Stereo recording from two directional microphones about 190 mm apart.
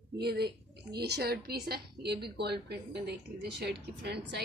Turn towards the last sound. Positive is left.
turn(degrees=-60)  # may be behind; listen again after turning